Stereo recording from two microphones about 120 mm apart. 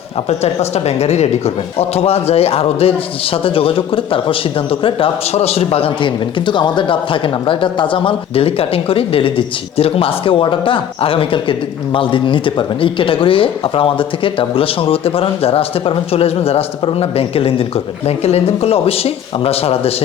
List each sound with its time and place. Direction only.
0.3 s speech: 60° left (ahead or behind)